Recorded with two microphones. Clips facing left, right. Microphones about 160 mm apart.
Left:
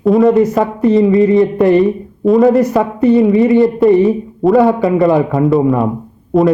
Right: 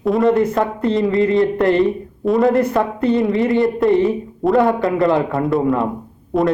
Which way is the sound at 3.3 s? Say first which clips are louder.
Left 7 dB; 20° left (ahead or behind).